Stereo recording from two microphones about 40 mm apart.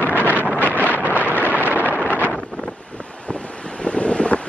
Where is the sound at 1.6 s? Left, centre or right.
Right.